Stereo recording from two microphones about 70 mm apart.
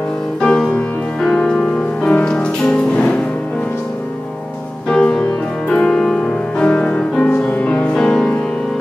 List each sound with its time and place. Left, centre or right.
0.4 s music: centre
4.8 s music: centre